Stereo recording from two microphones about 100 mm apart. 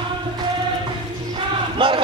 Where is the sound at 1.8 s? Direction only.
55° right (ahead or behind).